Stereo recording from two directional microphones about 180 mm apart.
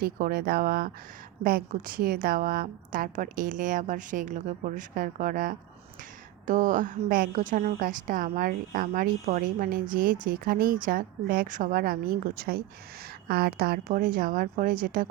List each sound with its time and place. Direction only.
0.0 s a woman's voice: 55° right (ahead or behind)